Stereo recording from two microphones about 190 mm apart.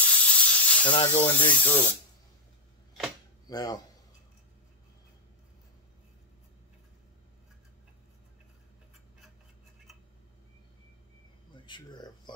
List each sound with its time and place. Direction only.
0.0 s snake: 5° left (ahead or behind)
0.9 s speech: 25° left (ahead or behind)
1.5 s speech: 10° left (ahead or behind)
3.4 s speech: 20° left (ahead or behind)
11.5 s a sound: 25° left (ahead or behind)